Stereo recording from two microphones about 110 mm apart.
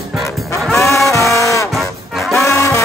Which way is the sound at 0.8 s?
30° left (ahead or behind).